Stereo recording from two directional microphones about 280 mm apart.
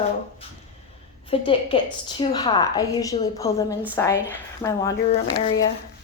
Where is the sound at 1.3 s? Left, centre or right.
Centre.